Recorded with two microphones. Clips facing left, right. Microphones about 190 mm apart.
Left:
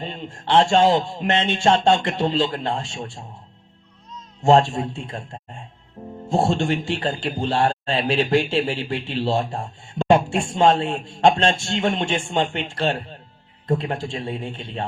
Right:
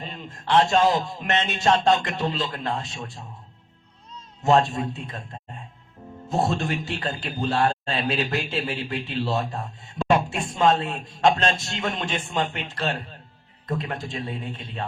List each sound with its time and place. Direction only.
0.0 s speech: 30° left (ahead or behind)
4.4 s speech: 30° left (ahead or behind)